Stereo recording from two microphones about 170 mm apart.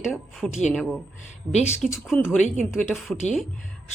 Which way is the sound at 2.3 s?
45° left (ahead or behind).